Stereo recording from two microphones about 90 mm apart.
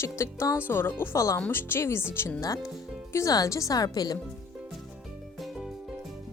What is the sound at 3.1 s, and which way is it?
Speech, 35° left (ahead or behind).